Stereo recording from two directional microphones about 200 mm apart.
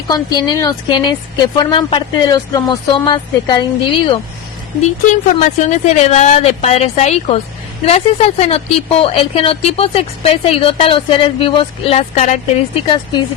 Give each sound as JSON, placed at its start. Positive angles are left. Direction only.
{"t": 0.1, "sound": "a woman's voice", "side_deg": 20}
{"t": 5.0, "sound": "a woman's voice", "side_deg": 35}